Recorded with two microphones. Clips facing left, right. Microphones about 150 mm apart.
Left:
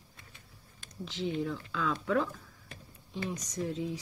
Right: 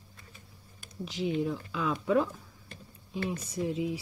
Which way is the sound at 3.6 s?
15° right (ahead or behind).